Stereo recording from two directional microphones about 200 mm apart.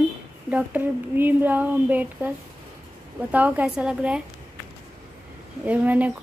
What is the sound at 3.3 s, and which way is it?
Speech, 10° right (ahead or behind).